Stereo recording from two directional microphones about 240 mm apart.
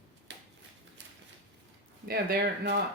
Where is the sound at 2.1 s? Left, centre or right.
Right.